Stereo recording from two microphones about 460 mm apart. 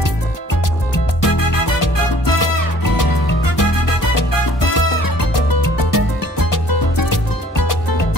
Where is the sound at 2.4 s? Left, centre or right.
Left.